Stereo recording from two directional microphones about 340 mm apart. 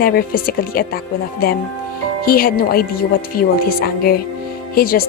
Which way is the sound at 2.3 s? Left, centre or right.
Left.